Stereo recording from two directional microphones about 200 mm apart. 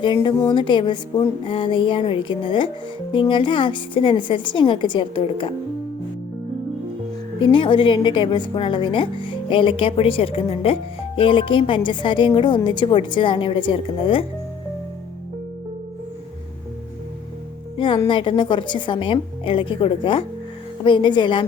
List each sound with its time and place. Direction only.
0.0 s a woman's voice: 25° left (ahead or behind)
7.3 s a woman's voice: 25° left (ahead or behind)
17.7 s a woman's voice: 25° left (ahead or behind)